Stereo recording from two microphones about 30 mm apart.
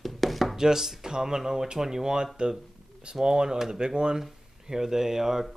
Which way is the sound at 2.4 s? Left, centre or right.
Right.